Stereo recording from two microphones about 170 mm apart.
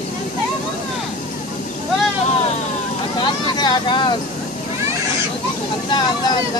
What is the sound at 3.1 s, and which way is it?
Vehicle, 25° left (ahead or behind).